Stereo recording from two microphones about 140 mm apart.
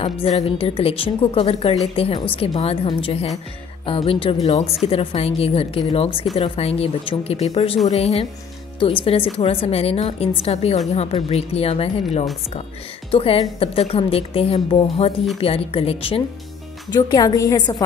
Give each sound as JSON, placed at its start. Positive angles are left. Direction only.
{"t": 0.0, "sound": "a woman's voice", "side_deg": 45}
{"t": 16.9, "sound": "a woman's voice", "side_deg": 30}